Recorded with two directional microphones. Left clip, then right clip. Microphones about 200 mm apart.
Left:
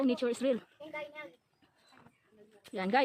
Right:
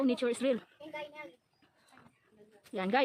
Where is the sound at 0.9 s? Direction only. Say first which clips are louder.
Left 1 dB; 20° left (ahead or behind).